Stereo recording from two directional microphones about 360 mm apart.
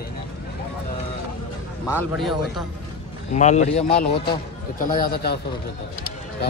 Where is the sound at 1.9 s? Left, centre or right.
Centre.